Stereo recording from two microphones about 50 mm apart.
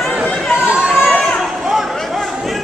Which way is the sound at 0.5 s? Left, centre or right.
Right.